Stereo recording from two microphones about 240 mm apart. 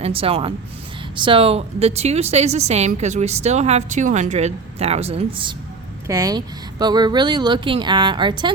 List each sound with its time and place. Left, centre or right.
0.0 s a woman's voice: right